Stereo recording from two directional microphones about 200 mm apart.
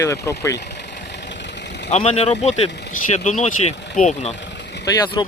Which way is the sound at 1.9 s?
35° left (ahead or behind).